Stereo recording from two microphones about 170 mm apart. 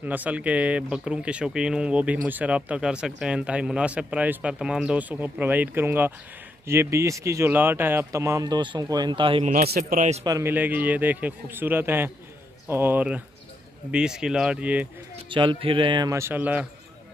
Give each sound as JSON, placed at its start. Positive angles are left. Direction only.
{"t": 0.0, "sound": "speech", "side_deg": -10}
{"t": 9.4, "sound": "a man's voice", "side_deg": -40}
{"t": 9.7, "sound": "a man's voice", "side_deg": -55}
{"t": 10.2, "sound": "speech", "side_deg": -20}
{"t": 10.5, "sound": "speech", "side_deg": -10}
{"t": 15.2, "sound": "speech", "side_deg": -30}